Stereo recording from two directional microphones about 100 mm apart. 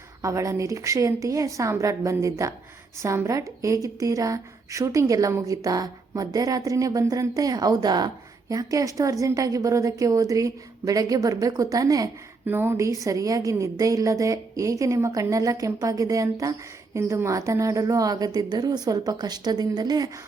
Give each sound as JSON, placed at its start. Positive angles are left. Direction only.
{"t": 0.2, "sound": "a woman's voice", "side_deg": -30}
{"t": 12.5, "sound": "a woman's voice", "side_deg": -20}
{"t": 12.7, "sound": "a woman's voice", "side_deg": -35}